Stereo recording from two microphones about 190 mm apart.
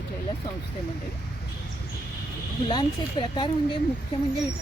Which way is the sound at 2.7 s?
25° left (ahead or behind).